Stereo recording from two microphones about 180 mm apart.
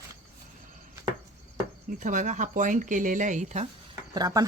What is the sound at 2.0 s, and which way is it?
Speech, 45° right (ahead or behind).